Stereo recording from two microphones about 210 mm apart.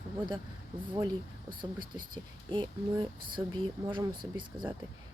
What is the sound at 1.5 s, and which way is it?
Speech, 20° right (ahead or behind).